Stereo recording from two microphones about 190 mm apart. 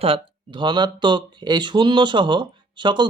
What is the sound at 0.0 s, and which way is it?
Speech, 25° right (ahead or behind).